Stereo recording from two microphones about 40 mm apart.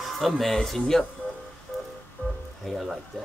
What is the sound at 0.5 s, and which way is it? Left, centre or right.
Speech, centre.